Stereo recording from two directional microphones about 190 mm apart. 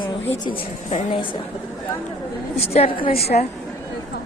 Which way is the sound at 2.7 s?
30° left (ahead or behind).